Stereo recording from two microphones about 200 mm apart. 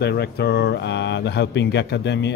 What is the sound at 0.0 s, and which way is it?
Speech, 55° left (ahead or behind).